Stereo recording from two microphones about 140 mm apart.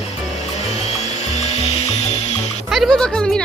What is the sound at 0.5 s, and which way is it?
Music, 50° left (ahead or behind).